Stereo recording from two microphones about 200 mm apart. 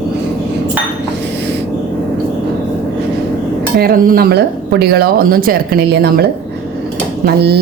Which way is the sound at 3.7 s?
50° right (ahead or behind).